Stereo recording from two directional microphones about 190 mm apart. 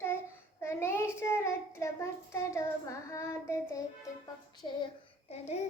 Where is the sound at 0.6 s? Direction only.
15° left (ahead or behind).